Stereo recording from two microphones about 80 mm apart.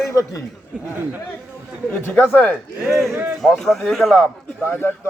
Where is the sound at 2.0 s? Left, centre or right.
Left.